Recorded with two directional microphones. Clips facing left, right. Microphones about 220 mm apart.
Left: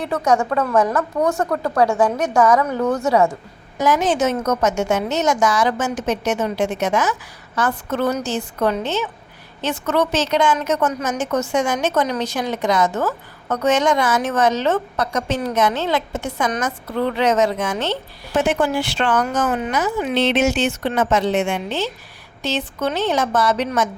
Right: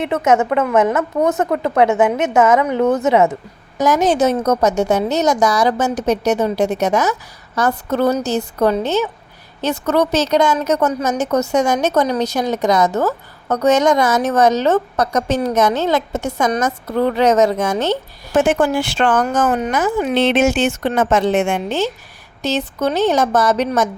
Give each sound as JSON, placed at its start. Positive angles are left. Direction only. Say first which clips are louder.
{"t": 0.0, "sound": "a woman's voice", "louder": "right 3 dB", "side_deg": -20}
{"t": 3.8, "sound": "a woman's voice", "louder": "right 3 dB", "side_deg": -40}